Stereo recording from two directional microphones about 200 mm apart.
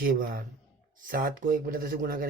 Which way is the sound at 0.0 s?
45° right (ahead or behind).